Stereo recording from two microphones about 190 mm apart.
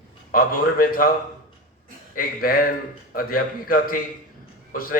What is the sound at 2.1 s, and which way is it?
Speech, 50° left (ahead or behind).